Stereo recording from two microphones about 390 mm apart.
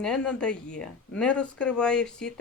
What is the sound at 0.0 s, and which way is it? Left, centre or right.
Speech, centre.